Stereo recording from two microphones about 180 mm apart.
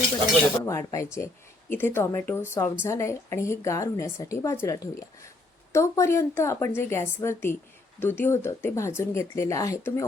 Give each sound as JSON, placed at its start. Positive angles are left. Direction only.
{"t": 0.6, "sound": "a woman's voice", "side_deg": 15}